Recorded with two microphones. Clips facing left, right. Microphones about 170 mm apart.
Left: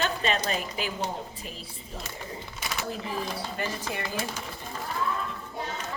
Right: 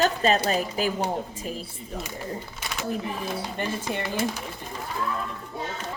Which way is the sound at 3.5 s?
25° right (ahead or behind).